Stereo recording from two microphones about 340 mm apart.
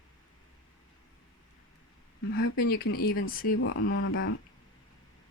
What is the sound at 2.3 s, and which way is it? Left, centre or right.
Speech, left.